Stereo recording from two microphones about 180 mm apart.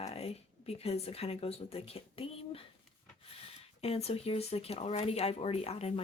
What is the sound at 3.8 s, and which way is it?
Speech, 35° left (ahead or behind).